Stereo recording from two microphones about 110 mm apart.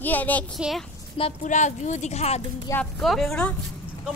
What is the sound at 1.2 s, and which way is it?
Speech, 75° left (ahead or behind).